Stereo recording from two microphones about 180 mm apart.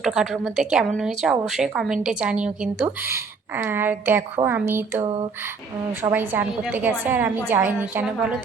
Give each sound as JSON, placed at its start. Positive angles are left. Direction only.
{"t": 0.0, "sound": "a woman's voice", "side_deg": -5}
{"t": 5.0, "sound": "a sound", "side_deg": -30}
{"t": 6.0, "sound": "a woman's voice", "side_deg": -10}